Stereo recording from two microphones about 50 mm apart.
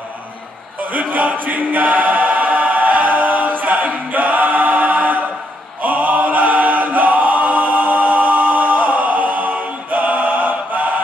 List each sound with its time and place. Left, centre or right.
0.9 s choir: right
5.8 s chant: right